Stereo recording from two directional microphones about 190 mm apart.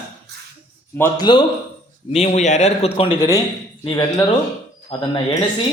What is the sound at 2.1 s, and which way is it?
A man's voice, 35° left (ahead or behind).